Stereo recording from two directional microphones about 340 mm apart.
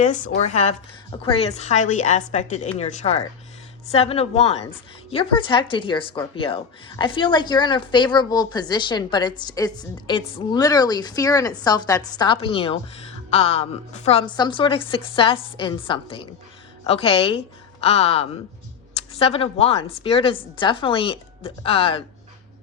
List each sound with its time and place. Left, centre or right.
0.0 s a woman's voice: left